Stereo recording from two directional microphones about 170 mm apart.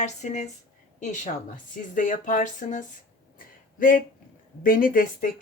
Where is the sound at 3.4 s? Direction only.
55° left (ahead or behind).